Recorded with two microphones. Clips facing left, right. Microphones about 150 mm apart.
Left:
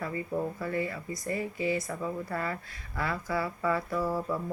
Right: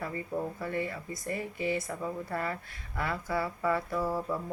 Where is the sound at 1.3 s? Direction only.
15° left (ahead or behind).